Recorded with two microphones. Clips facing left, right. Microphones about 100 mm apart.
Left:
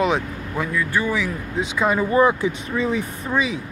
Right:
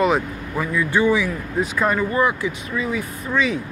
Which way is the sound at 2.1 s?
25° left (ahead or behind).